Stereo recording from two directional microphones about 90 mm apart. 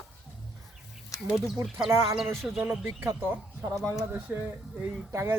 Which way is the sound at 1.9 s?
30° right (ahead or behind).